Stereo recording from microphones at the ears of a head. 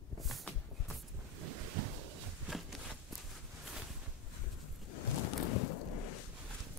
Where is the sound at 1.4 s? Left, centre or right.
Right.